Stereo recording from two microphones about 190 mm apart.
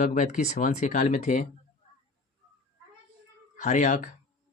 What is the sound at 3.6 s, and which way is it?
Speech, 40° left (ahead or behind).